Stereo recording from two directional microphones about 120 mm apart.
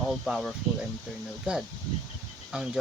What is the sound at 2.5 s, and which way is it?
Speech, 5° right (ahead or behind).